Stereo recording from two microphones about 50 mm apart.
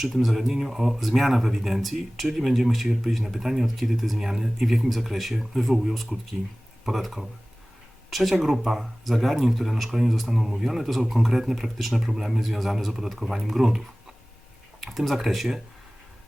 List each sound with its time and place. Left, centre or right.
0.0 s speech: centre
14.8 s speech: centre